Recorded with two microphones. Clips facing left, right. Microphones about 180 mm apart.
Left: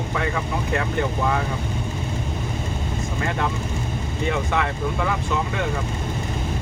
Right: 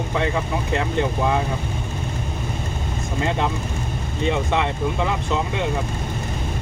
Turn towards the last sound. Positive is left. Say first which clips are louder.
# right 1 dB
turn(degrees=-20)  # may be behind; listen again after turning